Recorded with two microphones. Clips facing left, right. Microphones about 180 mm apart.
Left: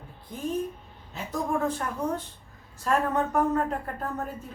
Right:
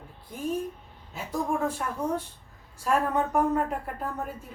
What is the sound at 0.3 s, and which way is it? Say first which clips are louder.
A woman's voice: even; 10° right (ahead or behind).